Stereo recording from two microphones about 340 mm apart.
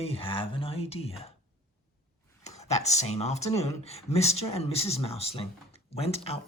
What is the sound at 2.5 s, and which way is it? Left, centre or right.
Speech, centre.